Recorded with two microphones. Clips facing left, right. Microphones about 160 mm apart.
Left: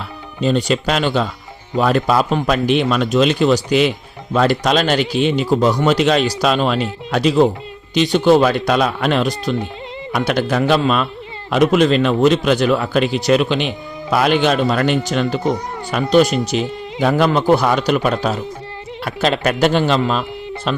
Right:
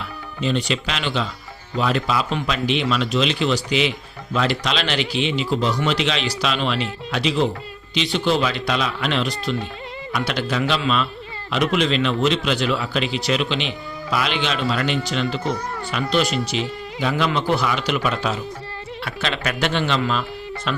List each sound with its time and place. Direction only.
0.4 s a man's voice: 45° left (ahead or behind)